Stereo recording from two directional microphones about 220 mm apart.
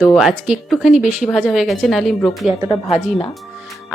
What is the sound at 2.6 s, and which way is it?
Speech, 20° left (ahead or behind).